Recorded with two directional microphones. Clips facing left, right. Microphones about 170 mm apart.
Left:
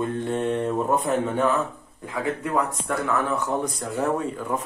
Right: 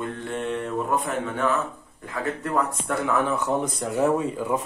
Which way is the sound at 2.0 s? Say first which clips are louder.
Left 1 dB; 10° left (ahead or behind).